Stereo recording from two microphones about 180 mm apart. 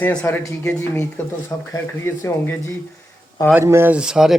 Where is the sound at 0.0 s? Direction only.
5° left (ahead or behind).